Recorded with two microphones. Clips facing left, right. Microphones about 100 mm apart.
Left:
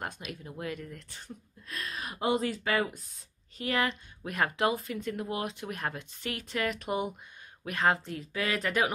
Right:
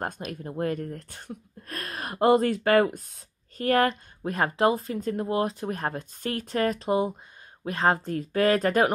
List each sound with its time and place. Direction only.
0.0 s speech: 40° right (ahead or behind)